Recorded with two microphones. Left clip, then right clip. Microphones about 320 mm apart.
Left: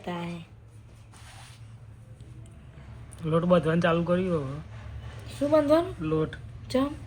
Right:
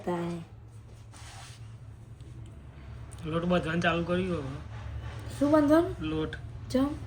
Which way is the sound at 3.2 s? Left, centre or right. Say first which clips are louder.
Left 6 dB; centre.